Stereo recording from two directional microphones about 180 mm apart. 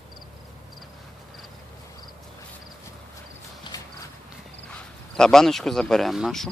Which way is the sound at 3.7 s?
25° left (ahead or behind).